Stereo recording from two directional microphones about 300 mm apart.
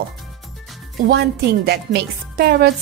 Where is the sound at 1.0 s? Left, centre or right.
Right.